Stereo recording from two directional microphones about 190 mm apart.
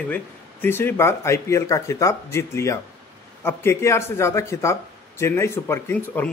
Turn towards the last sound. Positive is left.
turn(degrees=10)  # may be behind; listen again after turning